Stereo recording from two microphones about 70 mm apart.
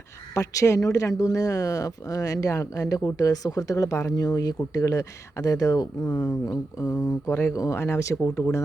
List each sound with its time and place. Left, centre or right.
0.3 s speech: left
4.1 s speech: left
7.3 s speech: left
7.5 s speech: left